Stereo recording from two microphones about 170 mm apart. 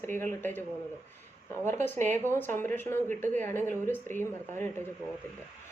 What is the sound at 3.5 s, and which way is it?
Speech, 10° left (ahead or behind).